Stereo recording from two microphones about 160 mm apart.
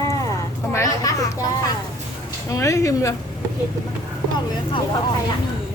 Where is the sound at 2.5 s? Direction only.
20° left (ahead or behind).